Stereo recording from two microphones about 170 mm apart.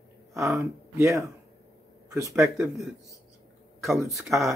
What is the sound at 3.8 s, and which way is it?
Speech, centre (ahead or behind).